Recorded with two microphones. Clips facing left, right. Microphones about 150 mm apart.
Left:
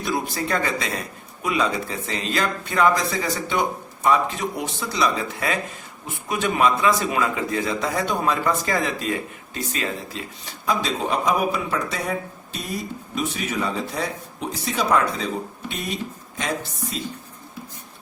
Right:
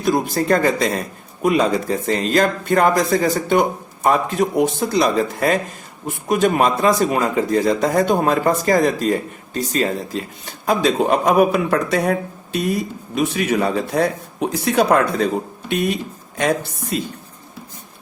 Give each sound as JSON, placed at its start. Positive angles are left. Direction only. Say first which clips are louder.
{"t": 0.0, "sound": "speech", "louder": "right 7 dB", "side_deg": -50}
{"t": 10.7, "sound": "speech", "louder": "right 7 dB", "side_deg": -55}
{"t": 16.9, "sound": "speech", "louder": "right 8 dB", "side_deg": -60}